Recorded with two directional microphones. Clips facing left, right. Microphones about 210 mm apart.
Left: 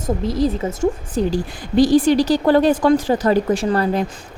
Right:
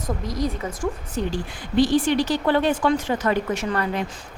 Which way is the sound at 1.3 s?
40° left (ahead or behind).